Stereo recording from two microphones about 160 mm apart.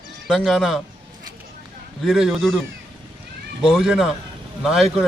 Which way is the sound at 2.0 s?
Centre (ahead or behind).